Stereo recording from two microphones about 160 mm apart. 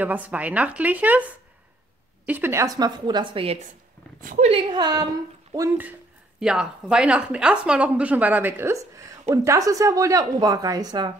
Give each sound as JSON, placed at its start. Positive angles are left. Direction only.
{"t": 0.0, "sound": "a woman's voice", "side_deg": -10}
{"t": 2.2, "sound": "speech", "side_deg": -10}
{"t": 4.2, "sound": "speech", "side_deg": -55}
{"t": 4.5, "sound": "speech", "side_deg": -30}
{"t": 6.4, "sound": "a woman's voice", "side_deg": -5}